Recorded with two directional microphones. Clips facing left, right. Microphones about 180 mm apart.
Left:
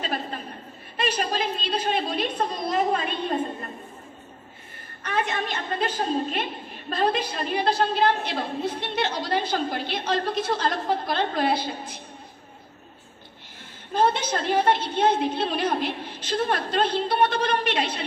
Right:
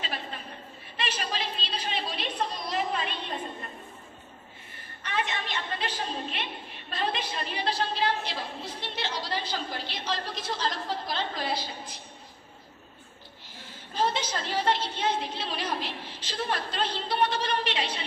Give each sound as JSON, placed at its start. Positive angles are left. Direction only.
{"t": 0.9, "sound": "a woman's voice", "side_deg": 45}
{"t": 5.0, "sound": "a woman's voice", "side_deg": 45}
{"t": 13.9, "sound": "a woman's voice", "side_deg": 55}